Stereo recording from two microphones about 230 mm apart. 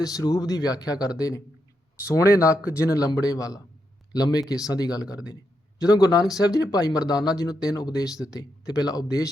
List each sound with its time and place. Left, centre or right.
0.0 s speech: centre